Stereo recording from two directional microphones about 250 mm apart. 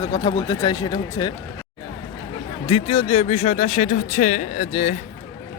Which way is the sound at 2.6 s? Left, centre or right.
Left.